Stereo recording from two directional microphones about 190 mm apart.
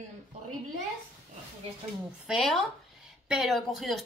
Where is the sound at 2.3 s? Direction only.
Centre (ahead or behind).